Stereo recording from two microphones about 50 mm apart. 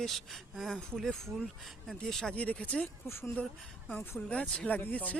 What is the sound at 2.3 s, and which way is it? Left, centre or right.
Speech, left.